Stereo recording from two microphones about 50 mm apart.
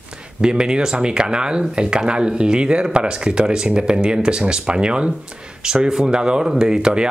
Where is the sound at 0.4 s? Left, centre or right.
Centre.